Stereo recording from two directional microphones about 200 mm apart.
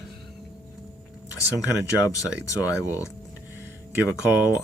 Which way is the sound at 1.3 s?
15° left (ahead or behind).